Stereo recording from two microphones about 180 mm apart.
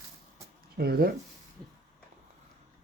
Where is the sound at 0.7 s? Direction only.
60° right (ahead or behind).